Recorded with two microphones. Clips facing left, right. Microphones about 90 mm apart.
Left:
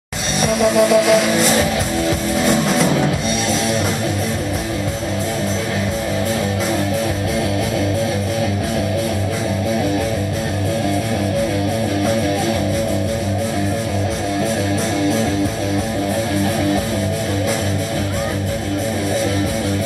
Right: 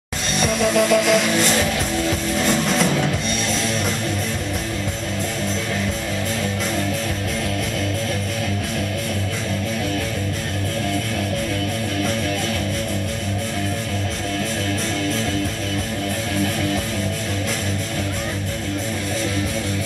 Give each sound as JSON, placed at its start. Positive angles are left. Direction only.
{"t": 0.4, "sound": "music", "side_deg": 5}